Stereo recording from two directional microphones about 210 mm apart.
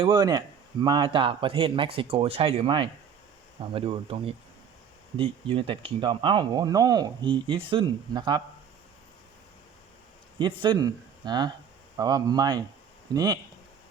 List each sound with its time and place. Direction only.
0.0 s speech: 20° right (ahead or behind)
10.3 s speech: 25° right (ahead or behind)